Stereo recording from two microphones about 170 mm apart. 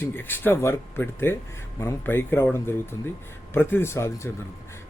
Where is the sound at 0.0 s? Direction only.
10° left (ahead or behind).